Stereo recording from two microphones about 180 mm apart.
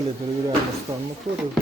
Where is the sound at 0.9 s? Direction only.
20° right (ahead or behind).